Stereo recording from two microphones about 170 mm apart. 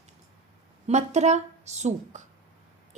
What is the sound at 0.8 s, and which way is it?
A woman's voice, 40° right (ahead or behind).